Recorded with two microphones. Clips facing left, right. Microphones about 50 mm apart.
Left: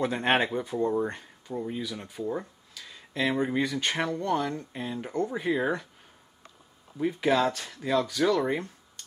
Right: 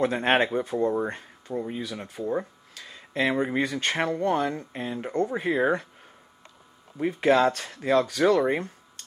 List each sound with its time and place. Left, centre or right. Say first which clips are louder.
0.0 s speech: right 3 dB; centre
2.8 s a sound: right 2 dB; right
3.2 s speech: right 2 dB; right
7.0 s speech: right 4 dB; right